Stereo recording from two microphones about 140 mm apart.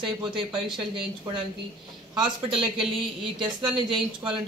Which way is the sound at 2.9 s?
35° right (ahead or behind).